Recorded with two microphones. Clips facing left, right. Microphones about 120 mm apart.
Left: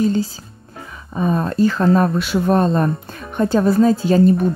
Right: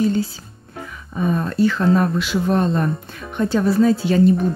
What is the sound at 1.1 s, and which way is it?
Speech, 35° left (ahead or behind).